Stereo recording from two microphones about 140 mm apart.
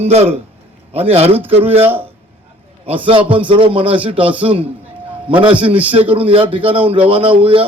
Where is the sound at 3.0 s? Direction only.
40° right (ahead or behind).